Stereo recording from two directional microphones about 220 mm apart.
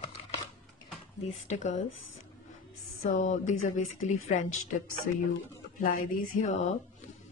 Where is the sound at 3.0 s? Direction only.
35° left (ahead or behind).